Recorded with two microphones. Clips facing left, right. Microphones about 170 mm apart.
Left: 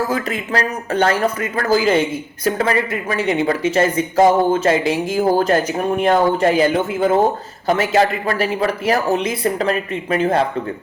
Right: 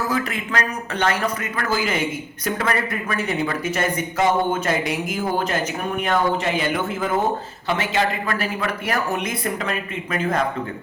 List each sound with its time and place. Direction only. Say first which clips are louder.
0.1 s speech: left 3 dB; 30° left (ahead or behind)